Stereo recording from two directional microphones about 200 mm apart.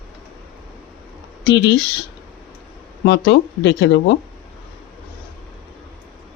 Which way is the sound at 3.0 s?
60° left (ahead or behind).